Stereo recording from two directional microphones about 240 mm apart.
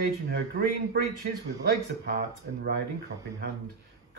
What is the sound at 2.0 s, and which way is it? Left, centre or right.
Speech, right.